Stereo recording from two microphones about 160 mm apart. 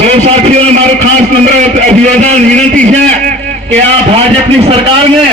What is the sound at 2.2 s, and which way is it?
A man's voice, 45° right (ahead or behind).